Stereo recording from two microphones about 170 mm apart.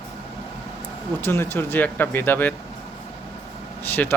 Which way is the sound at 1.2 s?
15° left (ahead or behind).